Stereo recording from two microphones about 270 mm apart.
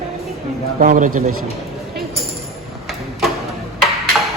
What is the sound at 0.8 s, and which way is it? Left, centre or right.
Speech, right.